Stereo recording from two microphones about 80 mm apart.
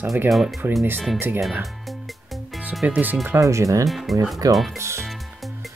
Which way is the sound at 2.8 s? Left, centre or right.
Centre.